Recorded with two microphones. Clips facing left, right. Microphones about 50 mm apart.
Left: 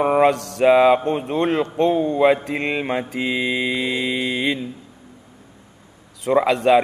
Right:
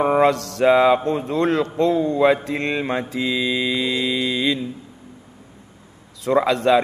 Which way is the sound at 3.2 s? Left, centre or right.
Left.